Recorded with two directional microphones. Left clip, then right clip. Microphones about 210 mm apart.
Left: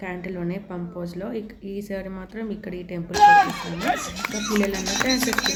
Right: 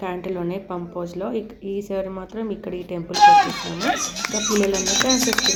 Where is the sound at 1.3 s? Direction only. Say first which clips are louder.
Right 5 dB; 35° left (ahead or behind).